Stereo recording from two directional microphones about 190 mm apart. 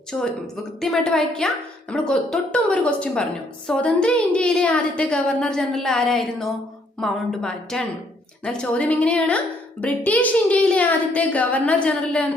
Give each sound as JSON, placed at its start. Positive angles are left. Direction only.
{"t": 0.1, "sound": "a woman's voice", "side_deg": 5}